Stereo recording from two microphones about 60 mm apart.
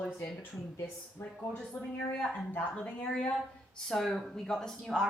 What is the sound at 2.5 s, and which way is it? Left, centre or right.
Speech, left.